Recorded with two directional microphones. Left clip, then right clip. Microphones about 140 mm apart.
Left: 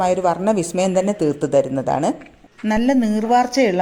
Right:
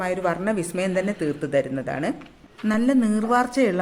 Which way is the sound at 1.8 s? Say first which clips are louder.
Left 8 dB; 25° left (ahead or behind).